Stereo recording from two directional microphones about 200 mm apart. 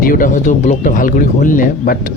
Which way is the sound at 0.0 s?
45° left (ahead or behind).